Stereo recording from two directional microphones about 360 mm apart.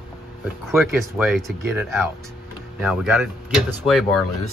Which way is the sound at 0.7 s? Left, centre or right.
Centre.